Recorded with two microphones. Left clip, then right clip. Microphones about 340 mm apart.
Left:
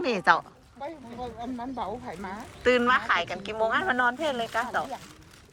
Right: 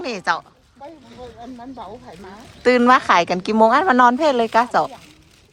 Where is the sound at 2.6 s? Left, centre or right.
Centre.